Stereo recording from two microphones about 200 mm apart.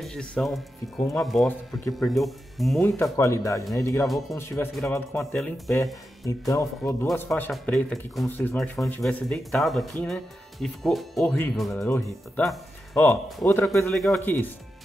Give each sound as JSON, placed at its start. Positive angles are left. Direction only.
{"t": 0.0, "sound": "speech", "side_deg": 5}
{"t": 3.0, "sound": "speech", "side_deg": 15}
{"t": 6.2, "sound": "speech", "side_deg": 15}